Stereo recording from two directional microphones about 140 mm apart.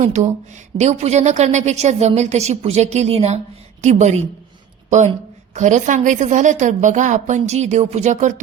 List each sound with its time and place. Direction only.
0.0 s a woman's voice: 60° right (ahead or behind)